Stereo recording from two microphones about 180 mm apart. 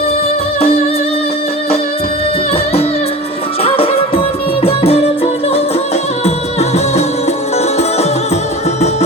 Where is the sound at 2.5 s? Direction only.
35° left (ahead or behind).